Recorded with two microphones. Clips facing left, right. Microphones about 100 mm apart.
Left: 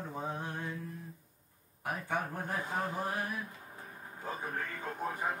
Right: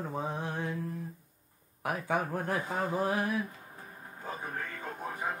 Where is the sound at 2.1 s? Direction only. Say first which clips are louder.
Right 5 dB; 90° right.